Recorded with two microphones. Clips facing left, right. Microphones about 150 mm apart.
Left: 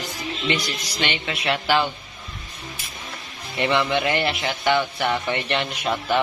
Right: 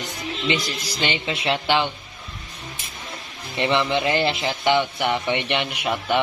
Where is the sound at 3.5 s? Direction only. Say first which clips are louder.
Even; 25° right (ahead or behind).